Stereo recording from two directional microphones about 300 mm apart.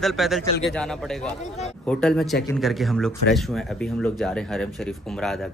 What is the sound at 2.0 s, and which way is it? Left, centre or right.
Speech, centre.